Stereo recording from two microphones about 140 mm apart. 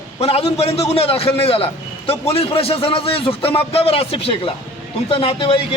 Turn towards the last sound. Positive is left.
turn(degrees=40)  # may be behind; listen again after turning